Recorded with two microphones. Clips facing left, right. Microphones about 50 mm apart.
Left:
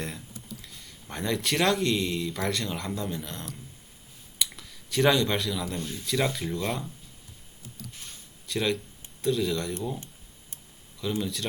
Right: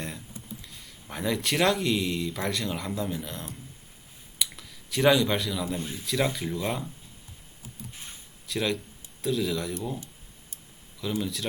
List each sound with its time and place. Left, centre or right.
0.6 s speech: centre
4.4 s a sound: centre
5.8 s speech: centre
7.8 s a sound: right
8.4 s speech: centre
11.2 s speech: centre